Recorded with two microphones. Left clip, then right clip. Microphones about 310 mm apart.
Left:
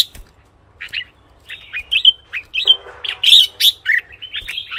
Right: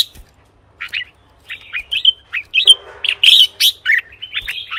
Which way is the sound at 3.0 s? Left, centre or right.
Right.